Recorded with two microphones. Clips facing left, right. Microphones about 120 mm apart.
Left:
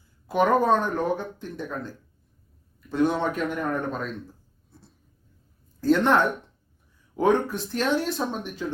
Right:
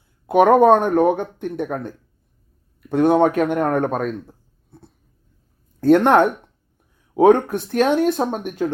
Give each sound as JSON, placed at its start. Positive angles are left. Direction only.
{"t": 0.3, "sound": "speech", "side_deg": -60}
{"t": 2.9, "sound": "speech", "side_deg": -60}